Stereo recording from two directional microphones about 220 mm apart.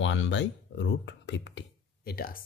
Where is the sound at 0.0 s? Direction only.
55° left (ahead or behind).